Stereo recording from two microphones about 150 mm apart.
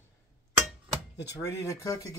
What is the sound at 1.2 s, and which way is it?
Speech, 20° left (ahead or behind).